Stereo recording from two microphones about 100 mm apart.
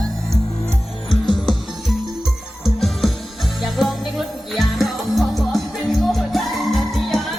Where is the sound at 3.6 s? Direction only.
Centre (ahead or behind).